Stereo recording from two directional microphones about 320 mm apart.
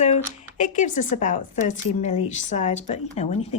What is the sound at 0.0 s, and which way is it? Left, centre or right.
Speech, left.